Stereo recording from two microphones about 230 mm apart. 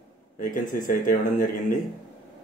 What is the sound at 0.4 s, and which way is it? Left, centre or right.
Speech, left.